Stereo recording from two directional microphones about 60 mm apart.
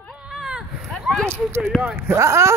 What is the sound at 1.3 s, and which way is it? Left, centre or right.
Speech, right.